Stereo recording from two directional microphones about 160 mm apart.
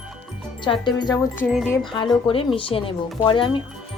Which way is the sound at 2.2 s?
35° left (ahead or behind).